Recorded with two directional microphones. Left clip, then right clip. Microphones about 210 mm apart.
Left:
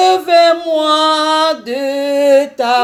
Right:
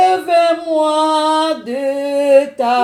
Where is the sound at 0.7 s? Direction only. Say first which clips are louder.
Left 2 dB; 30° left (ahead or behind).